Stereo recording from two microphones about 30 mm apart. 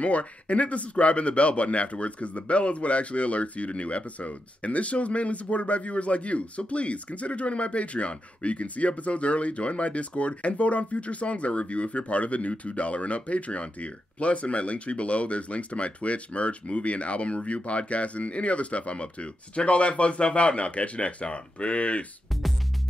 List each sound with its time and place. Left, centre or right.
0.0 s speech: left
22.3 s music: centre